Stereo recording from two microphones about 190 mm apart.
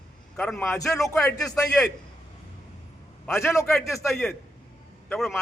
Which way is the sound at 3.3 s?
15° left (ahead or behind).